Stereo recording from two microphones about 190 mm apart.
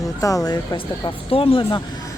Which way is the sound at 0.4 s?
20° left (ahead or behind).